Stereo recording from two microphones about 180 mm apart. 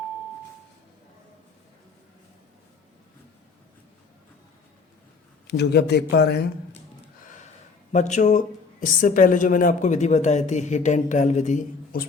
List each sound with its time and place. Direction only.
5.5 s a man's voice: 65° left (ahead or behind)
7.3 s a sound: 45° left (ahead or behind)
7.9 s speech: 40° left (ahead or behind)